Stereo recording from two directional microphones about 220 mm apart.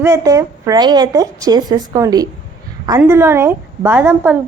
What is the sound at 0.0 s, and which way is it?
A woman's voice, 15° right (ahead or behind).